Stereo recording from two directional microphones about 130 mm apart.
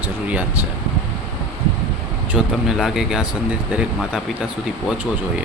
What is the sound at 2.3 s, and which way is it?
Speech, centre (ahead or behind).